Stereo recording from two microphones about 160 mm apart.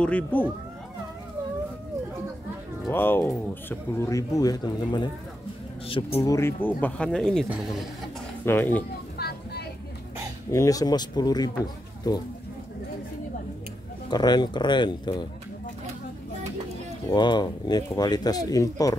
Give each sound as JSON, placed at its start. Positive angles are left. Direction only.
{"t": 0.0, "sound": "speech", "side_deg": 10}
{"t": 2.9, "sound": "speech", "side_deg": 15}
{"t": 6.2, "sound": "speech", "side_deg": 15}
{"t": 8.5, "sound": "speech", "side_deg": 15}
{"t": 9.2, "sound": "a sound", "side_deg": 80}
{"t": 10.5, "sound": "speech", "side_deg": 20}
{"t": 14.1, "sound": "speech", "side_deg": 25}
{"t": 17.1, "sound": "speech", "side_deg": 30}